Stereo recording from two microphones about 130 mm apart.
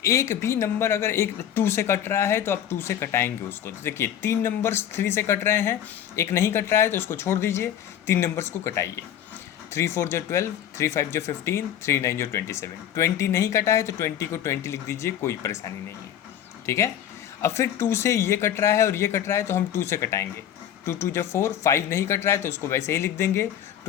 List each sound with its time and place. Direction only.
0.0 s speech: 25° left (ahead or behind)